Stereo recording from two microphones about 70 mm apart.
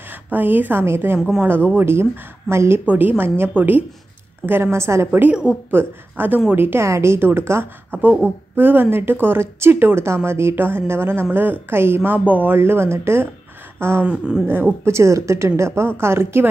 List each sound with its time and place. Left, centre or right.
0.1 s a woman's voice: right
2.9 s a woman's voice: right
5.3 s speech: centre
5.7 s a woman's voice: right
7.9 s a woman's voice: right
13.7 s gasp: right
14.0 s speech: centre
14.5 s a woman's voice: right